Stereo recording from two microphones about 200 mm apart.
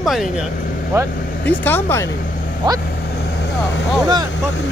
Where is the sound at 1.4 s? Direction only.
10° left (ahead or behind).